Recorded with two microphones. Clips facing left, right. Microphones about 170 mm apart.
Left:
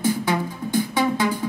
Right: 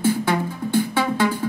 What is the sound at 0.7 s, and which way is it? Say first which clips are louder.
Music: even; 15° left (ahead or behind).